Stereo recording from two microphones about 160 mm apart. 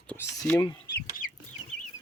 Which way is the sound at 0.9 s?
90° left.